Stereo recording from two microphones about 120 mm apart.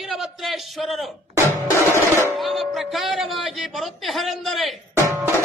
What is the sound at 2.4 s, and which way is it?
Music, centre (ahead or behind).